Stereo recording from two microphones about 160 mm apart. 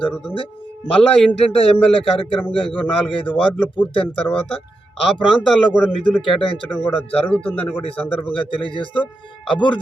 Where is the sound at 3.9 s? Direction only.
35° left (ahead or behind).